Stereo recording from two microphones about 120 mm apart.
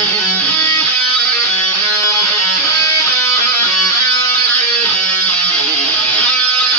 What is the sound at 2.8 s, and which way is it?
Music, 25° left (ahead or behind).